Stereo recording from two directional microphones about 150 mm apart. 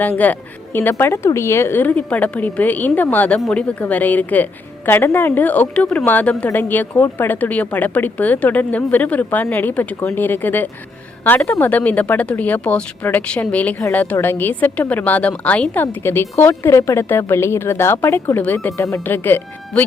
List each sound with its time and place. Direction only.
0.0 s a woman's voice: 10° left (ahead or behind)